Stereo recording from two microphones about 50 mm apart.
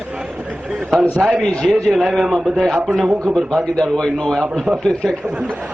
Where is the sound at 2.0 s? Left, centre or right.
Centre.